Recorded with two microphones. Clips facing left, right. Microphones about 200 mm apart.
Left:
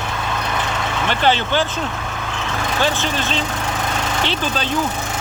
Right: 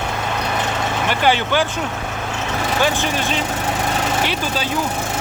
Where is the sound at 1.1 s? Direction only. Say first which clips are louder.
Even; 10° right (ahead or behind).